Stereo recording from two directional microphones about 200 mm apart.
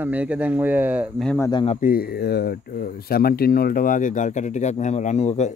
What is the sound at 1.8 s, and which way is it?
Speech, 45° left (ahead or behind).